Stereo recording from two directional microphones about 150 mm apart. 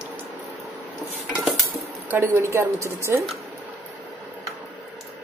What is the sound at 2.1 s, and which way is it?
Speech, 15° right (ahead or behind).